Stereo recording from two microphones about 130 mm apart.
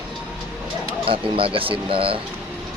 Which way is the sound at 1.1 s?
45° right (ahead or behind).